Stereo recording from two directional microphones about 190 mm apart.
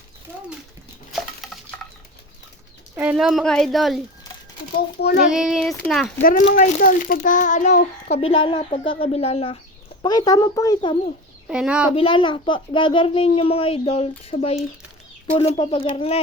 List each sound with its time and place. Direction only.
1.4 s dishes: centre (ahead or behind)
2.9 s speech: 10° right (ahead or behind)
4.9 s child singing: 60° left (ahead or behind)
5.3 s speech: 5° right (ahead or behind)
6.6 s a child's voice: 45° left (ahead or behind)
8.2 s speech: 30° left (ahead or behind)
10.0 s speech: 20° left (ahead or behind)
11.4 s speech: 5° right (ahead or behind)
11.9 s speech: 25° left (ahead or behind)